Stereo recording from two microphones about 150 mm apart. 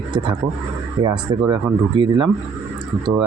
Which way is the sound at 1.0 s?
30° right (ahead or behind).